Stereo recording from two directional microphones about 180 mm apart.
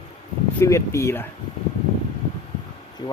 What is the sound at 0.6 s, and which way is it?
Speech, 15° left (ahead or behind).